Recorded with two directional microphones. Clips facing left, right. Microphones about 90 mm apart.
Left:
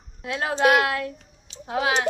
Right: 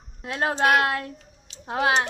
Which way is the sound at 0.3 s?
35° right (ahead or behind).